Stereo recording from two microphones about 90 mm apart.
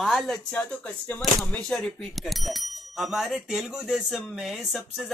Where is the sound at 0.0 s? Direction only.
Centre (ahead or behind).